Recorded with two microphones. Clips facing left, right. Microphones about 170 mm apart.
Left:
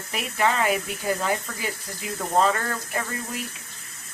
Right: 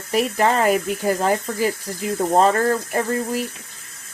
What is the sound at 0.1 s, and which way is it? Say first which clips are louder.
Speech: right 6 dB; 35° right (ahead or behind).